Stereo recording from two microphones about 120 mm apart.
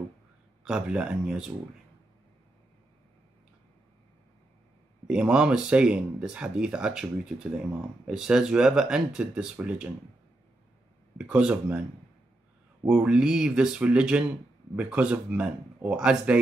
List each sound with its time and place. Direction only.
0.7 s speech: 10° right (ahead or behind)
5.0 s speech: 5° right (ahead or behind)
11.1 s speech: 10° right (ahead or behind)
12.8 s speech: 5° right (ahead or behind)